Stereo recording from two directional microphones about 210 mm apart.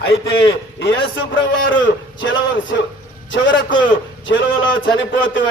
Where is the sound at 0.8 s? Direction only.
65° left (ahead or behind).